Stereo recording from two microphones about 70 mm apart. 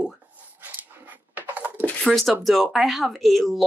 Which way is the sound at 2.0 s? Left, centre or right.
Centre.